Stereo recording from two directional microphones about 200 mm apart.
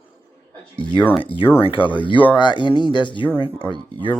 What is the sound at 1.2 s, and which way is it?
Speech, 25° left (ahead or behind).